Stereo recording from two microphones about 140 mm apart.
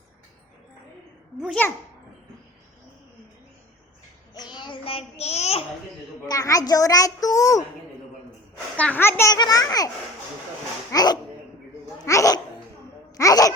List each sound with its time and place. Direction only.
1.6 s a child's voice: 10° left (ahead or behind)
4.4 s child singing: 35° left (ahead or behind); by 5.6 s 50° left (ahead or behind)
6.2 s a child's voice: 25° left (ahead or behind)
8.7 s a child's voice: 10° left (ahead or behind)
9.3 s a child's voice: 25° left (ahead or behind)
10.9 s a child's voice: 30° left (ahead or behind)